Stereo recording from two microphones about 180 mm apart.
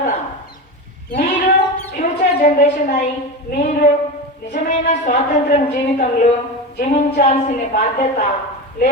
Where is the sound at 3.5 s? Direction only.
50° left (ahead or behind).